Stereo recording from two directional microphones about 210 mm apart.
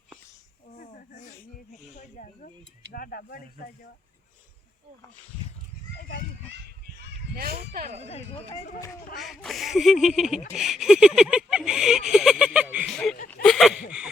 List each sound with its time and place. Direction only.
0.8 s snake: 40° left (ahead or behind)
2.9 s speech: 45° left (ahead or behind)
6.0 s children playing: 45° left (ahead or behind)
7.0 s speech: 45° right (ahead or behind)
9.1 s a sound: centre (ahead or behind)